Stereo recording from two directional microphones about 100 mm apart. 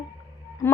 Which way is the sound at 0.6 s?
25° left (ahead or behind).